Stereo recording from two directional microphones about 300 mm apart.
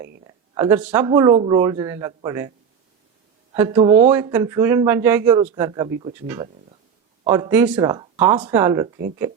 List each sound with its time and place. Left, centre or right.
0.3 s a sound: centre
0.9 s speech: centre
3.5 s speech: centre
4.1 s speech: centre